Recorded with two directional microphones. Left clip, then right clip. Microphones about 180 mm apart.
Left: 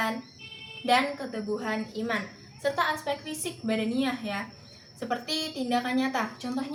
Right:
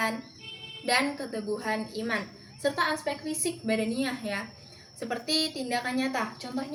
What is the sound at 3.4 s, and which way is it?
A woman's voice, 20° right (ahead or behind).